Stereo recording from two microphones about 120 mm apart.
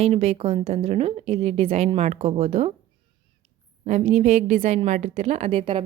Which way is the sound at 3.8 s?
65° right (ahead or behind).